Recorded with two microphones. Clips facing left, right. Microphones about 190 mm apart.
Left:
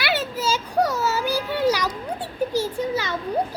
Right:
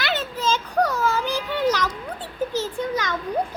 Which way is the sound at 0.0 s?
10° left (ahead or behind).